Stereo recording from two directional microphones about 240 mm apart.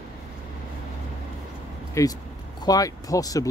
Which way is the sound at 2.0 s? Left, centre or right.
Centre.